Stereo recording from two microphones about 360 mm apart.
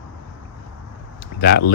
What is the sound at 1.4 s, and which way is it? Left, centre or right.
Speech, left.